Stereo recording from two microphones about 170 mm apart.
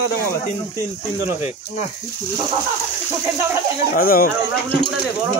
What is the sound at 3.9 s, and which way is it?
Speech, 60° left (ahead or behind).